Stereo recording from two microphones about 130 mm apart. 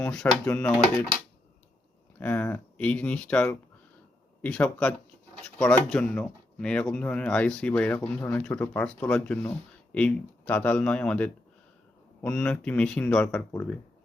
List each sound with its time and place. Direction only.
0.0 s speech: 5° left (ahead or behind)
2.1 s speech: 15° left (ahead or behind)